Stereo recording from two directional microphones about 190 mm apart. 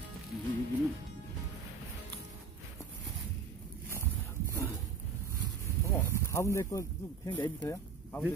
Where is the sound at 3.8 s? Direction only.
10° left (ahead or behind).